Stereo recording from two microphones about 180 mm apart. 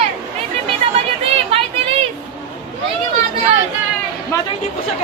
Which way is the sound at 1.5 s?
30° right (ahead or behind).